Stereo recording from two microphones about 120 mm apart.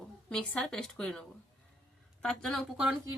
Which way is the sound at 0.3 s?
10° left (ahead or behind).